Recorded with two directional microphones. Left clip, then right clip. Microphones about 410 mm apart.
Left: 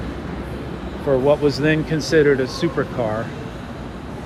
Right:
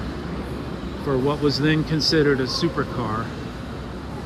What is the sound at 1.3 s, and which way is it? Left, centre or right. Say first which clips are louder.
Speech: left 4 dB; centre.